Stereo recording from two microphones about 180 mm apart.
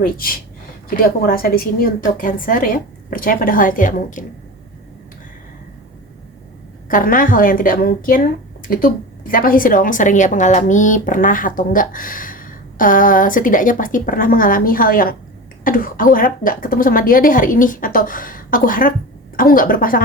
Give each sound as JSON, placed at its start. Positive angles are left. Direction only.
{"t": 0.0, "sound": "a woman's voice", "side_deg": 55}
{"t": 6.8, "sound": "a woman's voice", "side_deg": 50}